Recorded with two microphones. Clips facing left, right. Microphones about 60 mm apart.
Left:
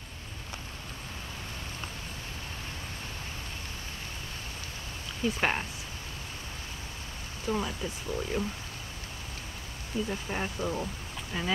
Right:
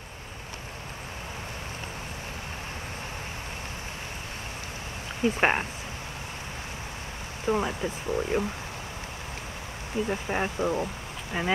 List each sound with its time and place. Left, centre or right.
5.2 s speech: right
7.4 s speech: right
10.0 s speech: right